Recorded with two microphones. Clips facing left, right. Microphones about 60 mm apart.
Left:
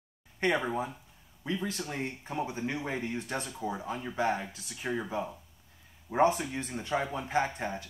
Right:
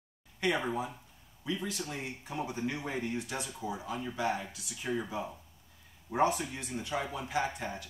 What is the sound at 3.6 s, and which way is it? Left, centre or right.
Speech, left.